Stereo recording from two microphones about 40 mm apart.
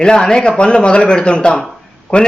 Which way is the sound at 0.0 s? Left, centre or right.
Centre.